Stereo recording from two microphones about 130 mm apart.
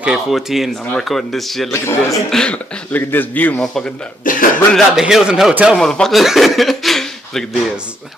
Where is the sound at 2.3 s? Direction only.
5° left (ahead or behind).